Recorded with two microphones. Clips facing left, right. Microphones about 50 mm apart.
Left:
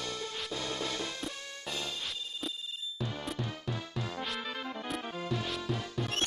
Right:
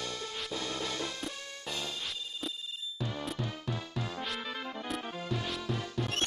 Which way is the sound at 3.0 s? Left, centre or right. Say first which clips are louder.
Right 1 dB; centre.